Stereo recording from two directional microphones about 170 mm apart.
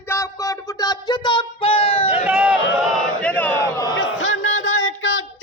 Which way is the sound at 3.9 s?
90° left.